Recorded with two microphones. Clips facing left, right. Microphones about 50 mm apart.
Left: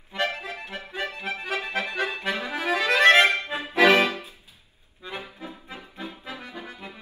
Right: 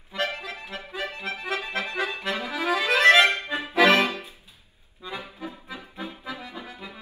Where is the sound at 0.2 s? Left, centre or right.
Left.